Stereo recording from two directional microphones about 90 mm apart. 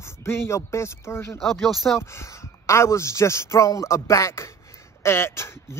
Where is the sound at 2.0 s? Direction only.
30° left (ahead or behind).